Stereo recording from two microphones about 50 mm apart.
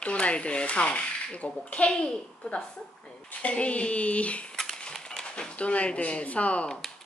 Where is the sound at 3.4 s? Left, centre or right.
Left.